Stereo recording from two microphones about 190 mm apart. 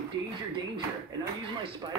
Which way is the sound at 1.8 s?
20° right (ahead or behind).